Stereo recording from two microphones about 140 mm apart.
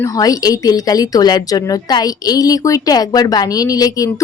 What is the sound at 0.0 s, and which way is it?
Speech, 25° left (ahead or behind).